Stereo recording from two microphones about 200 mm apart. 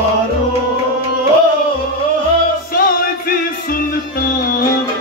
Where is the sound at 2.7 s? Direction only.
45° left (ahead or behind).